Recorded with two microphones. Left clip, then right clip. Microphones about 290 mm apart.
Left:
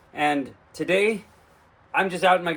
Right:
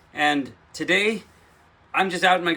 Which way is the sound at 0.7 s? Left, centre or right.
Centre.